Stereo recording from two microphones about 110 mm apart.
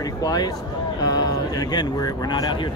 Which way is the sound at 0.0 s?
35° left (ahead or behind).